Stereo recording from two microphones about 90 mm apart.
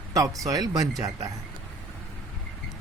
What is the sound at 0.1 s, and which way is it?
Speech, 40° right (ahead or behind).